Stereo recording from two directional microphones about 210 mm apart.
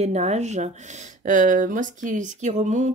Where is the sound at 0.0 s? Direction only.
30° right (ahead or behind).